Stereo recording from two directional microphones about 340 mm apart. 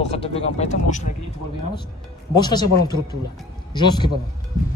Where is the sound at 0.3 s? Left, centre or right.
Centre.